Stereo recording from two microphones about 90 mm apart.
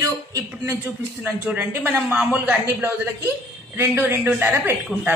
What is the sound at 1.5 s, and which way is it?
A man's voice, 15° right (ahead or behind).